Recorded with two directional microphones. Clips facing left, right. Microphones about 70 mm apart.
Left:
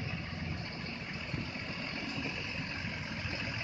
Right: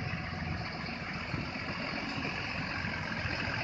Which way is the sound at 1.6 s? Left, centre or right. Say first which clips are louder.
Right 3 dB; right.